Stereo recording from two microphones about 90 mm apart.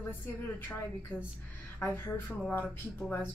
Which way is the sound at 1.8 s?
25° left (ahead or behind).